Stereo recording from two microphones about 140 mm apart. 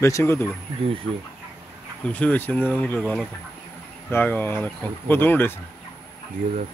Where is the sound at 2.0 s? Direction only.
10° left (ahead or behind).